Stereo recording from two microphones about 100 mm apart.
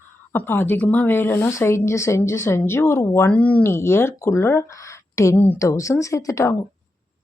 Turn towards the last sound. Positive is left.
turn(degrees=30)  # may be behind; listen again after turning